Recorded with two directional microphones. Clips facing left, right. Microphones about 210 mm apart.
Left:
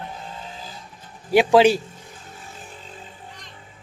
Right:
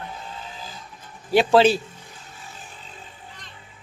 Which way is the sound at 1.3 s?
15° left (ahead or behind).